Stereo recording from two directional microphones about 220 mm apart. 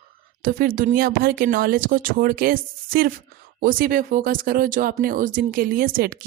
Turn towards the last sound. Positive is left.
turn(degrees=-40)  # may be behind; listen again after turning